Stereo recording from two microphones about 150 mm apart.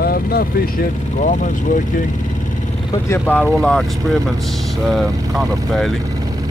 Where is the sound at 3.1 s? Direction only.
10° left (ahead or behind).